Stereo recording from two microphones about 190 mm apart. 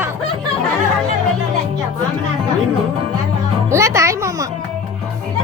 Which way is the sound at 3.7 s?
15° right (ahead or behind).